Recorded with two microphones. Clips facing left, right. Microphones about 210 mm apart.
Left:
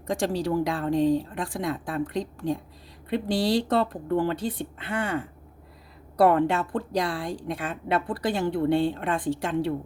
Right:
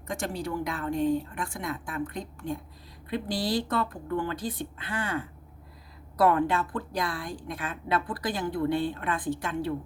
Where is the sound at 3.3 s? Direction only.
75° left (ahead or behind).